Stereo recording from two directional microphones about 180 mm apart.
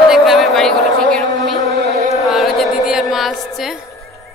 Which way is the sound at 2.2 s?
Centre (ahead or behind).